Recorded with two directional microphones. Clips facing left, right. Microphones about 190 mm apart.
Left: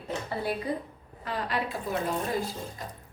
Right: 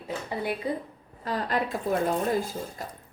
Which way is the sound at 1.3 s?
45° right (ahead or behind).